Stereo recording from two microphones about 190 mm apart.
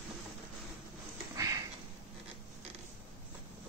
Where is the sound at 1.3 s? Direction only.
15° right (ahead or behind).